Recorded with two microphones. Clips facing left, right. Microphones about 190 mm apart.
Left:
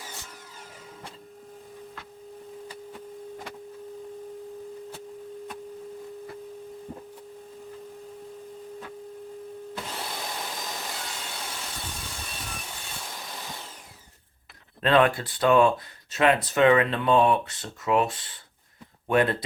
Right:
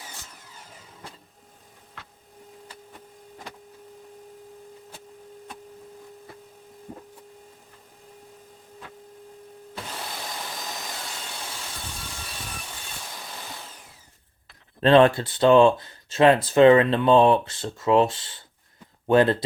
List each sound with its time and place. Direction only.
14.8 s speech: 30° right (ahead or behind)